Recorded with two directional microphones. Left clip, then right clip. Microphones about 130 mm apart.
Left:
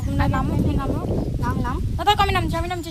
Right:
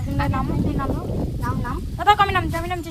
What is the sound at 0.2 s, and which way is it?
Speech, 45° left (ahead or behind).